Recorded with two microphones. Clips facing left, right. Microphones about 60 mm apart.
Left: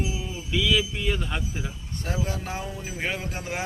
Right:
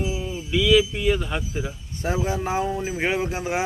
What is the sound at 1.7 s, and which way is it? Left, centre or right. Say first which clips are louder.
Speech: right 5 dB; centre.